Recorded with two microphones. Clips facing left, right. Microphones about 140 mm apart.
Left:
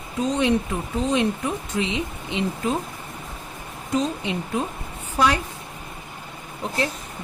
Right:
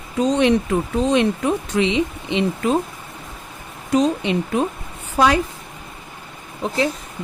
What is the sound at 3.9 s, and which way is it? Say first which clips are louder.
Speech: right 6 dB; 75° right (ahead or behind).